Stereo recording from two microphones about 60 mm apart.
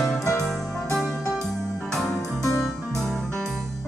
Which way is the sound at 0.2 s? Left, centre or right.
Left.